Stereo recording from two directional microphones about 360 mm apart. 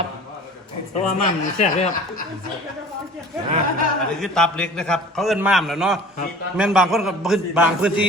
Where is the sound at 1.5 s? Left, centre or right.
Centre.